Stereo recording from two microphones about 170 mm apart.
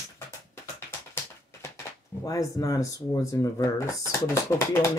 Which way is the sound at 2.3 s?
20° left (ahead or behind).